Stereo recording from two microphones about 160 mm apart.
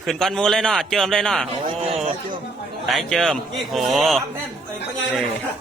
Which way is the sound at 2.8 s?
Centre (ahead or behind).